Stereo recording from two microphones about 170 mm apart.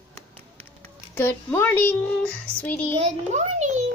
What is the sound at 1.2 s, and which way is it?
A child's voice, 15° left (ahead or behind).